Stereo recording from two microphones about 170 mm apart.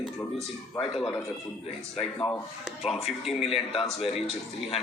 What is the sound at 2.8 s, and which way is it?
Speech, centre (ahead or behind).